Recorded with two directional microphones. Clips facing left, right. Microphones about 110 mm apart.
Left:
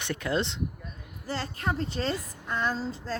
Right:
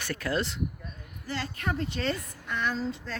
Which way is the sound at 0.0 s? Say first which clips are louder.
Left 1 dB; 20° left (ahead or behind).